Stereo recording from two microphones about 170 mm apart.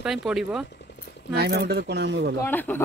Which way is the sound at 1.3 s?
75° right (ahead or behind).